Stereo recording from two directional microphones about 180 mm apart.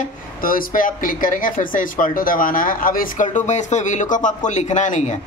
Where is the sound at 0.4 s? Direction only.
50° left (ahead or behind).